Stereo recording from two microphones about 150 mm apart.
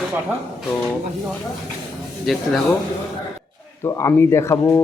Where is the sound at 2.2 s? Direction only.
5° left (ahead or behind).